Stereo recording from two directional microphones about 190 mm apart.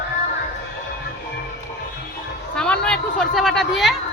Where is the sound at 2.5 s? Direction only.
5° left (ahead or behind).